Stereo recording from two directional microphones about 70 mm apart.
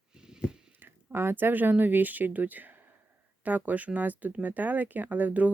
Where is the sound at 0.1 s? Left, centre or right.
Centre.